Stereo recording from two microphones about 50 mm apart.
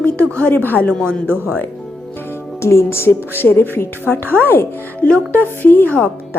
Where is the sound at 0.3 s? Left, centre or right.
Left.